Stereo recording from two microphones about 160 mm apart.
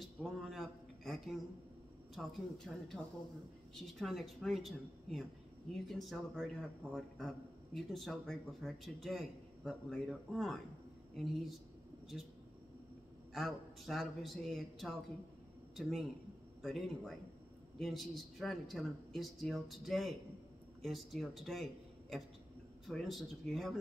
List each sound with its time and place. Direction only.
0.0 s a man's voice: centre (ahead or behind)
13.3 s a man's voice: centre (ahead or behind)
22.8 s a man's voice: centre (ahead or behind)